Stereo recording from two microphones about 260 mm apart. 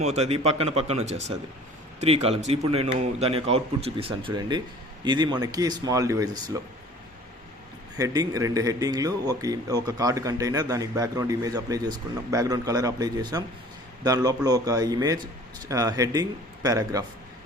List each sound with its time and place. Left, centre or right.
0.0 s a man's voice: right
7.9 s speech: centre